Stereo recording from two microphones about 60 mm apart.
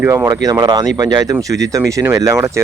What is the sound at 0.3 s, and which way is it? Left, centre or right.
Speech, right.